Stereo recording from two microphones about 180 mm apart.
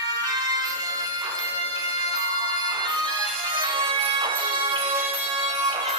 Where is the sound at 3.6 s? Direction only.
25° right (ahead or behind).